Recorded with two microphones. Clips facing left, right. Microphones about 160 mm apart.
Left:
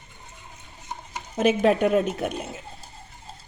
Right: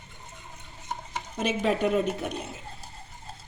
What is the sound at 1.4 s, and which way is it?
Speech, 55° left (ahead or behind).